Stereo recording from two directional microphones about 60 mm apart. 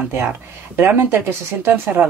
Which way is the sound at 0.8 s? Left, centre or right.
Right.